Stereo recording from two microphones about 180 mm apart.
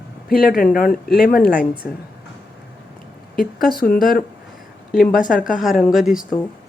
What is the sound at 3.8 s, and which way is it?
Speech, 55° left (ahead or behind).